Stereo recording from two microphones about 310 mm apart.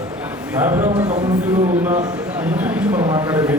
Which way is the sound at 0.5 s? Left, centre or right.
Centre.